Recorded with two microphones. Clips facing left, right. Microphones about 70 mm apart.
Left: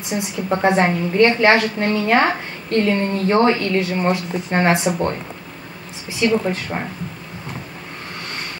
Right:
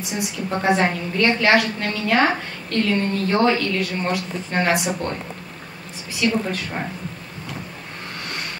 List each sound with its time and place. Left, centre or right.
0.1 s a woman's voice: left
6.2 s a woman's voice: left